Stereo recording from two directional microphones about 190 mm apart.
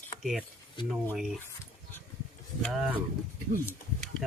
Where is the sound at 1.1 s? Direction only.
Centre (ahead or behind).